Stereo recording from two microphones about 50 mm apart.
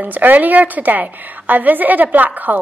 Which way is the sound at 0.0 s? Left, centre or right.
Right.